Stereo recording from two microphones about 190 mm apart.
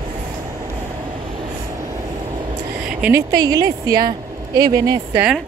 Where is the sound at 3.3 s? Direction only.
20° right (ahead or behind).